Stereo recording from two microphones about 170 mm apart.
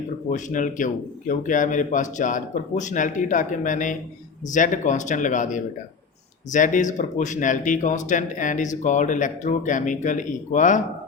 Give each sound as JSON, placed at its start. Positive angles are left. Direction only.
{"t": 0.3, "sound": "speech", "side_deg": 50}